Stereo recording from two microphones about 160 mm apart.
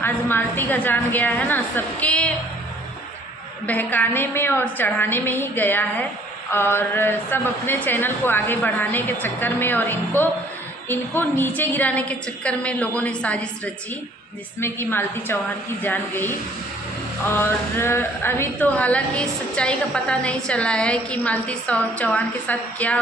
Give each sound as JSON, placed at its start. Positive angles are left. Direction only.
{"t": 0.0, "sound": "a woman's voice", "side_deg": 10}
{"t": 3.7, "sound": "a woman's voice", "side_deg": 10}
{"t": 14.6, "sound": "a woman's voice", "side_deg": 15}